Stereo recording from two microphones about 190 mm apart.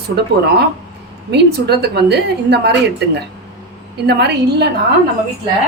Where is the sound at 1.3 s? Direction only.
60° right (ahead or behind).